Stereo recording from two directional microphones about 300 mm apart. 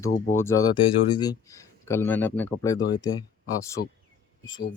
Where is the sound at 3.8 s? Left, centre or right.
Left.